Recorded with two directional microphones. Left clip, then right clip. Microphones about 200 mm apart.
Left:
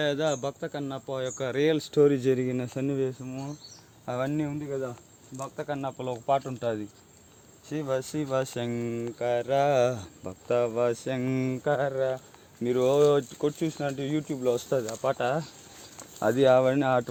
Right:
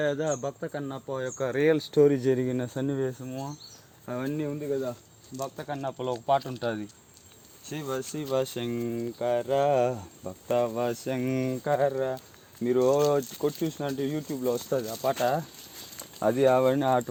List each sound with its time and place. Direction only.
0.0 s speech: 5° left (ahead or behind)
4.0 s speech: 55° left (ahead or behind)
5.4 s speech: 5° left (ahead or behind)
7.9 s speech: 55° left (ahead or behind); by 10.6 s 20° left (ahead or behind)
10.6 s speech: 5° left (ahead or behind)
12.6 s speech: 20° left (ahead or behind)
13.6 s speech: 5° left (ahead or behind)
14.1 s speech: 20° left (ahead or behind)
15.2 s speech: 10° left (ahead or behind)
16.2 s speech: 20° left (ahead or behind)